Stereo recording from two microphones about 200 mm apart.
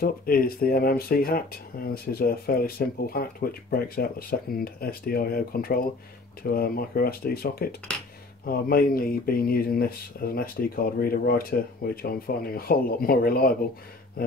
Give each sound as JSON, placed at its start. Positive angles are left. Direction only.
{"t": 0.0, "sound": "speech", "side_deg": 45}